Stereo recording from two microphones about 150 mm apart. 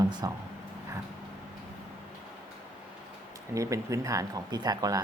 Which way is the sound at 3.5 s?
20° right (ahead or behind).